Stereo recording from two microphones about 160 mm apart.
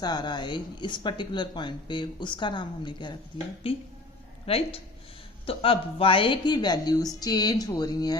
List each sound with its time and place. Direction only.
0.0 s speech: 25° left (ahead or behind)
4.4 s speech: 35° left (ahead or behind)